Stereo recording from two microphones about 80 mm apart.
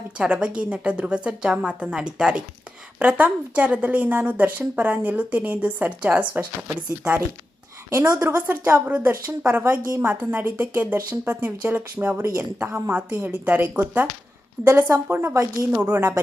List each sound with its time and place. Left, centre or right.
0.2 s a woman's voice: centre
7.9 s a woman's voice: right
8.2 s a woman's voice: right
12.2 s a woman's voice: right
12.5 s a woman's voice: right
14.6 s a woman's voice: right